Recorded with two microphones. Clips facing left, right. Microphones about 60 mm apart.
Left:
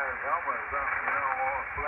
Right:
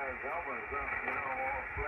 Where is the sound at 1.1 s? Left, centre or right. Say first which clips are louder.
Left 8 dB; left.